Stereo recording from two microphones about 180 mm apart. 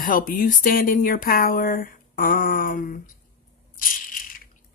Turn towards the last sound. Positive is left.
turn(degrees=50)  # may be behind; listen again after turning